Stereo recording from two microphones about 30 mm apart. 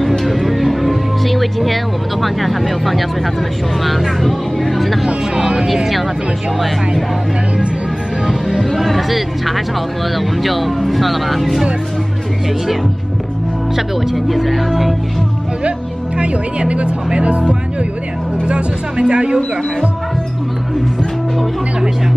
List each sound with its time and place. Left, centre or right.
0.2 s music: centre
2.2 s speech: centre
5.0 s speech: right
8.3 s music: centre
8.8 s speech: centre
14.2 s speech: centre
16.2 s speech: right